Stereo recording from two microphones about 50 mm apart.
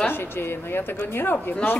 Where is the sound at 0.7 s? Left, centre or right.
Left.